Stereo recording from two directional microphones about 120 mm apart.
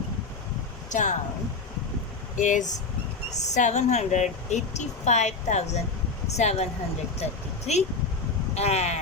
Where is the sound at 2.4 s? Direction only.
90° left.